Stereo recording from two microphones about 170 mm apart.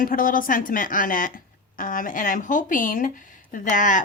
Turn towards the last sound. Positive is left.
turn(degrees=50)  # may be behind; listen again after turning